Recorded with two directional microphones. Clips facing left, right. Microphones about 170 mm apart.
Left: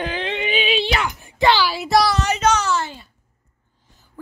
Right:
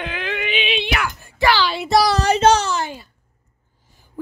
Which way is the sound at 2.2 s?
30° right (ahead or behind).